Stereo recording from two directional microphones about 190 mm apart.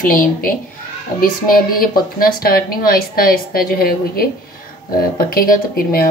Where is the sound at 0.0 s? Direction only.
45° left (ahead or behind).